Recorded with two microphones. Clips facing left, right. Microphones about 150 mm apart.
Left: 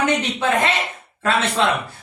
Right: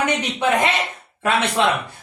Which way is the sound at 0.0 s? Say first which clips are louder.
Left 1 dB; 15° right (ahead or behind).